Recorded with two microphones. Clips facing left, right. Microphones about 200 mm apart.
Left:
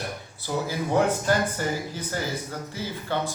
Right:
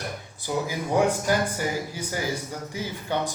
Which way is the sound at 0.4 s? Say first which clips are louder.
Even; 15° right (ahead or behind).